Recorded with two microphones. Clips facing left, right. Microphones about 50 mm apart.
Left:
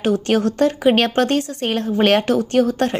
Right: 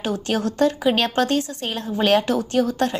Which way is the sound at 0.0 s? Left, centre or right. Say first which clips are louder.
Left 6 dB; left.